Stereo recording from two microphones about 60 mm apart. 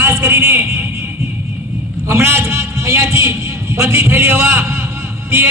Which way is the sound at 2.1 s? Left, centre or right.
Right.